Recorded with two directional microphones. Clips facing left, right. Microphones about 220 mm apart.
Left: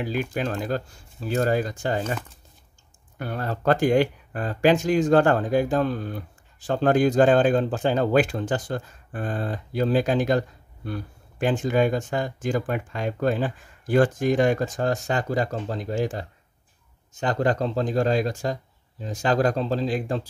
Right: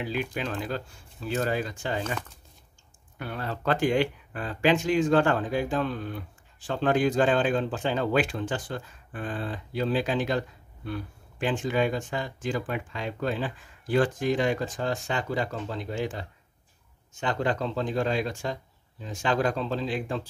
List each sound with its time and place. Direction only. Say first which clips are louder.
0.0 s speech: left 4 dB; 45° left (ahead or behind)
3.2 s speech: left 4 dB; 45° left (ahead or behind)